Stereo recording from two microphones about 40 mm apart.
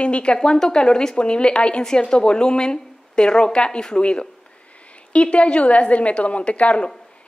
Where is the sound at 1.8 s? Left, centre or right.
Centre.